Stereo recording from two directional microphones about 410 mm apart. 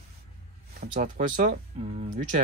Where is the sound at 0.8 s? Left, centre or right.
Centre.